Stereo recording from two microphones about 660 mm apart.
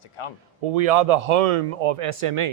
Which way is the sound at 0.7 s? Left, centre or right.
Right.